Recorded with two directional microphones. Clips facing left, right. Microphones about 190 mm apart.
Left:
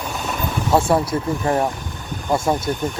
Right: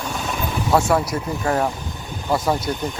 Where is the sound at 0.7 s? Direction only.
25° left (ahead or behind).